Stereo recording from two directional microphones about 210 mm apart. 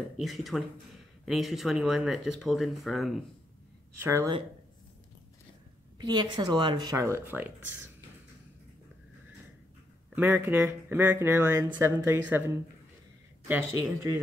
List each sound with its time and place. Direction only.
0.2 s speech: centre (ahead or behind)
4.0 s speech: 10° right (ahead or behind)
5.9 s speech: 20° right (ahead or behind)
10.1 s speech: 10° right (ahead or behind)